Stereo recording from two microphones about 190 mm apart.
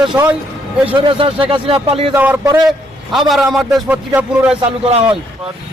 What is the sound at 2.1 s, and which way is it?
A man's voice, 10° right (ahead or behind).